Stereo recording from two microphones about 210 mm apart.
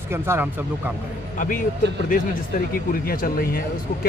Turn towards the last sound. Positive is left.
turn(degrees=45)  # may be behind; listen again after turning